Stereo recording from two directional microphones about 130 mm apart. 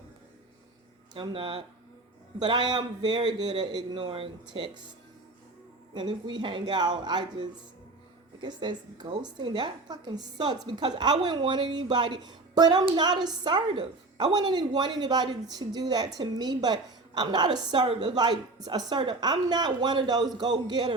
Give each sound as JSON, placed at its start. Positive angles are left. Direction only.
{"t": 1.1, "sound": "a woman's voice", "side_deg": -40}
{"t": 5.9, "sound": "a woman's voice", "side_deg": -35}